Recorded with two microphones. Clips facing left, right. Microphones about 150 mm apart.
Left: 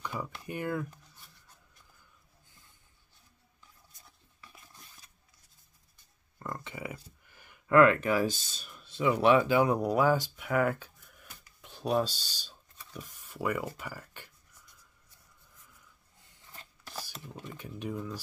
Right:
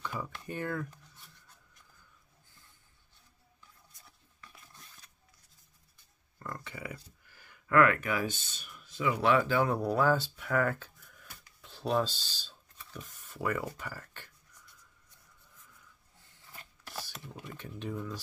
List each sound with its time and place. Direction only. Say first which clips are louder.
0.0 s speech: left 1 dB; 10° left (ahead or behind)
6.4 s speech: left 3 dB; 20° left (ahead or behind)
9.2 s speech: left 3 dB; 20° left (ahead or behind)
11.4 s a sound: left 1 dB; 15° left (ahead or behind)
16.9 s a sound: even; 10° left (ahead or behind)
17.6 s speech: left 1 dB; 10° left (ahead or behind)